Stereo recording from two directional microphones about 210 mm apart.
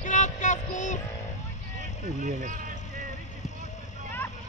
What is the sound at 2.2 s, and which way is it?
Speech, 35° right (ahead or behind).